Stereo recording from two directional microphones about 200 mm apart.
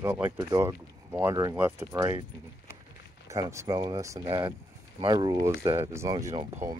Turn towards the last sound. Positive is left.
turn(degrees=-15)  # may be behind; listen again after turning